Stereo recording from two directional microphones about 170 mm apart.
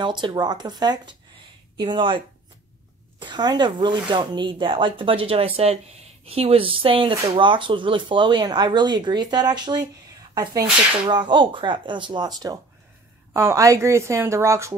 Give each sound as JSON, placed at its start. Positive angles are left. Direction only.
{"t": 0.0, "sound": "a woman's voice", "side_deg": -25}